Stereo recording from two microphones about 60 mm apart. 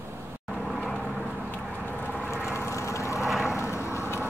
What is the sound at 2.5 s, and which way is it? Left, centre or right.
Vehicle, left.